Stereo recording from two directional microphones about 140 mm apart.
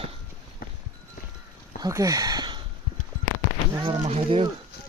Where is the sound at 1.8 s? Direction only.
25° right (ahead or behind).